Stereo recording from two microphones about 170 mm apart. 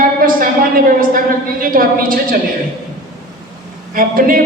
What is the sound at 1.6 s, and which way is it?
Speech, 55° right (ahead or behind).